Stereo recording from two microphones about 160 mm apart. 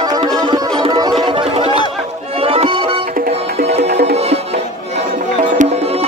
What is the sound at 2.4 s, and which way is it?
Music, 35° right (ahead or behind).